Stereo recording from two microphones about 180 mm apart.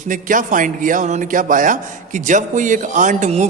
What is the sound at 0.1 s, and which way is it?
Speech, 45° right (ahead or behind).